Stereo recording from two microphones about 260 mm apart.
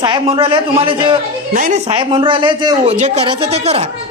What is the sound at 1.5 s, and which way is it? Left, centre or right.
Speech, right.